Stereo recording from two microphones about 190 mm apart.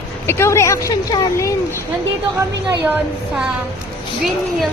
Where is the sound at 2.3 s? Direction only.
15° right (ahead or behind).